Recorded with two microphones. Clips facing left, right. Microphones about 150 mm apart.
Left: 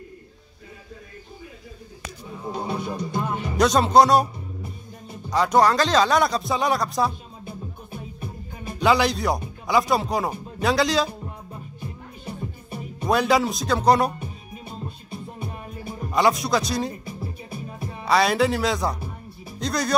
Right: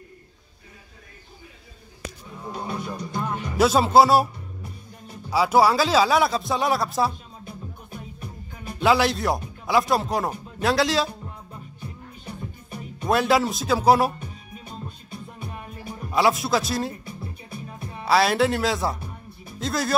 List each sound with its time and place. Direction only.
2.5 s music: 25° left (ahead or behind)
3.5 s speech: 5° right (ahead or behind)
5.3 s speech: 5° right (ahead or behind)
8.7 s speech: centre (ahead or behind)
13.0 s speech: centre (ahead or behind)
14.6 s music: 30° left (ahead or behind)
16.1 s speech: centre (ahead or behind)
17.2 s music: 25° left (ahead or behind)
18.0 s speech: centre (ahead or behind)